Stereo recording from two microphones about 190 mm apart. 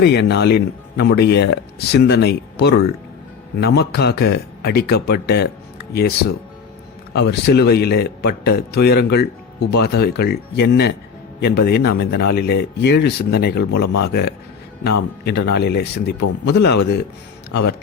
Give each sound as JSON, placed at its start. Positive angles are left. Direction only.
{"t": 0.0, "sound": "speech", "side_deg": 60}